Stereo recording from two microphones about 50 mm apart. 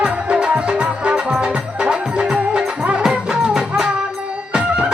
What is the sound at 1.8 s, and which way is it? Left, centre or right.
Music, centre.